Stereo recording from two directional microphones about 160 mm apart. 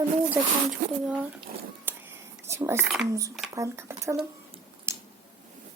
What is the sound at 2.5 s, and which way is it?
Speech, 15° right (ahead or behind).